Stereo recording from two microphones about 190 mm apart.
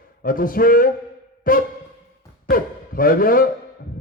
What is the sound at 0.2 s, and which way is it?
A man's voice, 50° left (ahead or behind).